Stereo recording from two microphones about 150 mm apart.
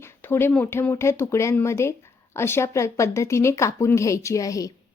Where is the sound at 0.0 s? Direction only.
15° left (ahead or behind).